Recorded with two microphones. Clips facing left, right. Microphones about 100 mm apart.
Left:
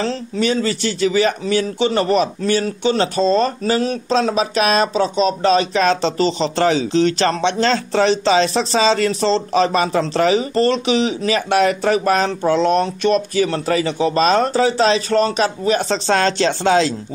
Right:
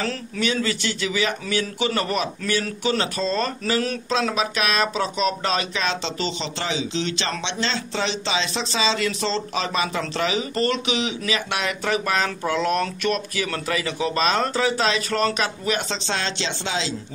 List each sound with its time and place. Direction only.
0.0 s speech: 35° left (ahead or behind)